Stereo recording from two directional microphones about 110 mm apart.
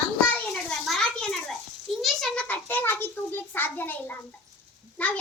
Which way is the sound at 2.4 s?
15° left (ahead or behind).